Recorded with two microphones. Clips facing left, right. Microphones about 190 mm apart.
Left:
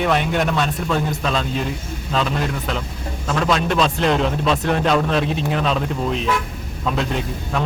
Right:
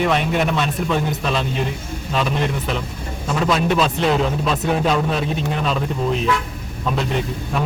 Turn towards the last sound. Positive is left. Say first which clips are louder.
# right 1 dB
turn(degrees=-5)  # may be behind; listen again after turning